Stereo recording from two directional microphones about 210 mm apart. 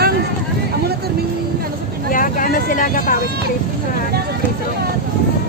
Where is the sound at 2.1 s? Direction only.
40° left (ahead or behind).